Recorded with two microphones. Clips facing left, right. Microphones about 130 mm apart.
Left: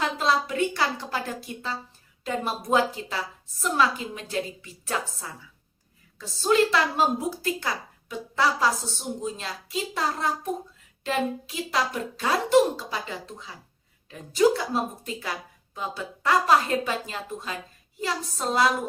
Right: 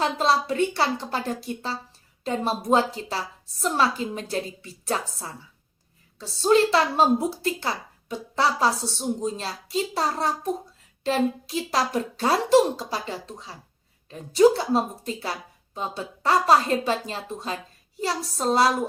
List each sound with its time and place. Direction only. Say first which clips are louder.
0.0 s a woman's voice: right 2 dB; 30° right (ahead or behind)